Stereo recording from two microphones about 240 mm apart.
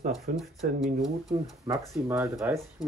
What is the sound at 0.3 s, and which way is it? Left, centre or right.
Speech, right.